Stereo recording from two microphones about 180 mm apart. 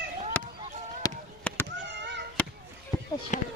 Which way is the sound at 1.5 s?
10° left (ahead or behind).